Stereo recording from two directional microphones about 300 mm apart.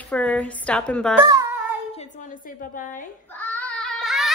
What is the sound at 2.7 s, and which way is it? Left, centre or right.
Speech, left.